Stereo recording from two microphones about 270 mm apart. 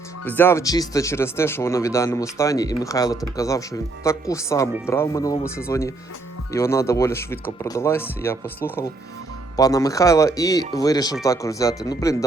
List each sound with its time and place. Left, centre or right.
0.3 s speech: centre